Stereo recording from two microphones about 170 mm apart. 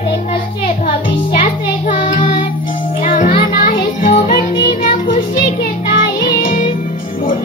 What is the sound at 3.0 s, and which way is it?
Music, 55° left (ahead or behind).